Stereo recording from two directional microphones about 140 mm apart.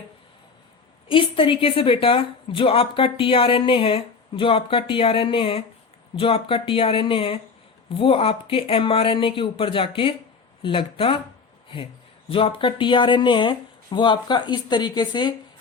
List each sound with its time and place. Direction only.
1.0 s a woman's voice: 40° left (ahead or behind)
12.3 s a woman's voice: 40° left (ahead or behind)